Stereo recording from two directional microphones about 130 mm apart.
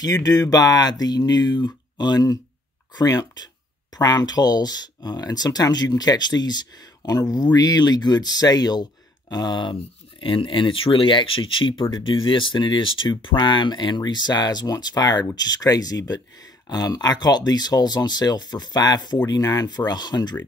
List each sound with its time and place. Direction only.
0.0 s speech: 30° left (ahead or behind)